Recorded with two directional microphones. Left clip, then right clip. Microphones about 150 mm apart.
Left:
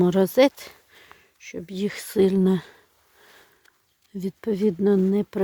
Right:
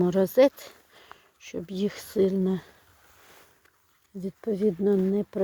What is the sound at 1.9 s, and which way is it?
Speech, 45° left (ahead or behind).